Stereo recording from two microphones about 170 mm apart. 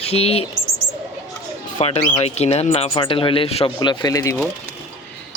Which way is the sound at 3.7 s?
25° left (ahead or behind).